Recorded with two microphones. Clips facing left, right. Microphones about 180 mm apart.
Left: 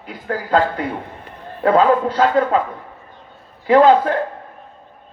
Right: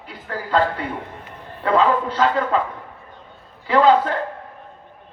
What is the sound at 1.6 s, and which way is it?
Speech, 50° left (ahead or behind).